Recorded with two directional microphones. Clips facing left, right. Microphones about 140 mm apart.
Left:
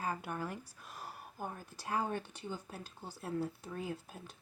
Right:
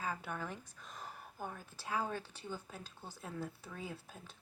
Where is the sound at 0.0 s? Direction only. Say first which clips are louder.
Left 3 dB; 15° left (ahead or behind).